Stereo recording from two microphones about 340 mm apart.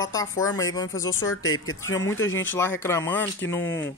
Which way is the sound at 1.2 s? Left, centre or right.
Left.